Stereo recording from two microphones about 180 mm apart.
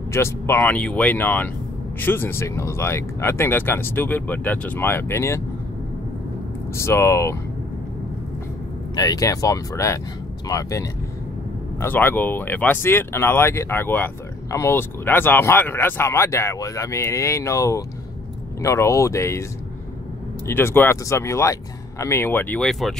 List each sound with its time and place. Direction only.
0.1 s speech: 15° left (ahead or behind)
6.7 s speech: 15° left (ahead or behind)
8.9 s speech: 20° left (ahead or behind)
20.4 s speech: 15° left (ahead or behind)